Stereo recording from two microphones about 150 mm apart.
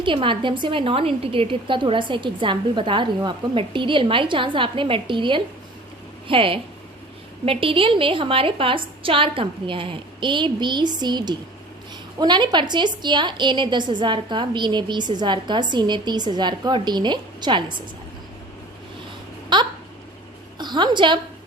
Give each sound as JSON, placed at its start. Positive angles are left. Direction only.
{"t": 0.0, "sound": "a woman's voice", "side_deg": -35}
{"t": 19.5, "sound": "a woman's voice", "side_deg": -30}